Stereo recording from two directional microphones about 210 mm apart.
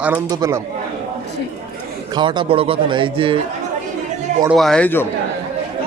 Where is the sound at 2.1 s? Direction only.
20° right (ahead or behind).